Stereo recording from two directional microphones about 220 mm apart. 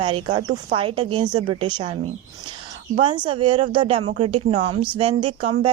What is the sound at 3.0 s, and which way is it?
Speech, 20° right (ahead or behind).